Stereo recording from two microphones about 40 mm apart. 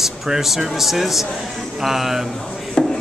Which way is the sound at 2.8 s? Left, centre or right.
Left.